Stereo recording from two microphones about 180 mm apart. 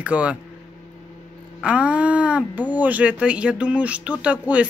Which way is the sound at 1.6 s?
5° right (ahead or behind).